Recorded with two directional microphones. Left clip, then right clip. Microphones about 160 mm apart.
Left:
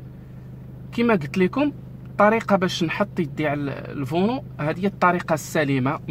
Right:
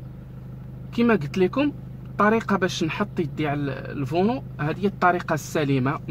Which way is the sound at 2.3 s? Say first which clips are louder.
Left 2 dB; 30° left (ahead or behind).